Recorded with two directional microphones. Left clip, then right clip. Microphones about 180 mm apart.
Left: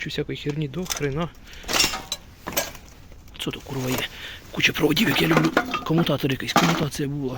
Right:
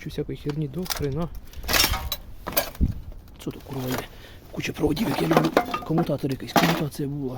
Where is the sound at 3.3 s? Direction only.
5° right (ahead or behind).